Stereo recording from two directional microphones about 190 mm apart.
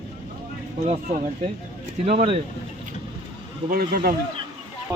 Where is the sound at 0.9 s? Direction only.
35° right (ahead or behind).